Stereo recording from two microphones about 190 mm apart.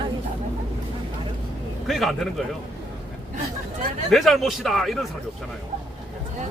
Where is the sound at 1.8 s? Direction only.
Centre (ahead or behind).